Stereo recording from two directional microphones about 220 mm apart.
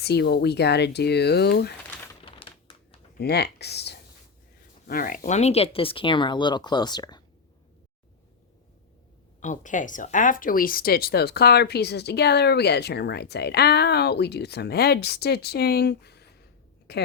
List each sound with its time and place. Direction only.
0.0 s speech: 50° left (ahead or behind)
3.2 s speech: 50° left (ahead or behind); by 7.2 s 20° left (ahead or behind)
9.4 s speech: 35° left (ahead or behind)